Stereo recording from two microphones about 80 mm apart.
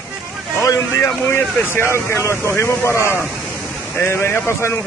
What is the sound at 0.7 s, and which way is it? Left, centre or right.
Speech, left.